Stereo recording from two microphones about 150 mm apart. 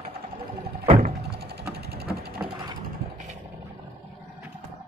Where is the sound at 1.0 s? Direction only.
90° right.